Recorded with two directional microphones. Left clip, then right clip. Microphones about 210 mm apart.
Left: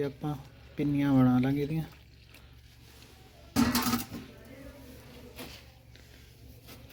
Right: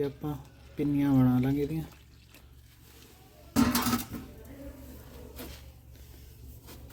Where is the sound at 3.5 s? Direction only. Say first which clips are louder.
Right 1 dB; 40° right (ahead or behind).